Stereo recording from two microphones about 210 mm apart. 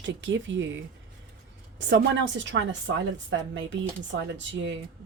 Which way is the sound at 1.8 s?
55° right (ahead or behind).